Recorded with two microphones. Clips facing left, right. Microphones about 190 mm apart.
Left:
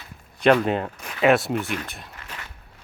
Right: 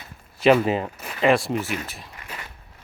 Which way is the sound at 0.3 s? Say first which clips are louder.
Right 1 dB; 5° right (ahead or behind).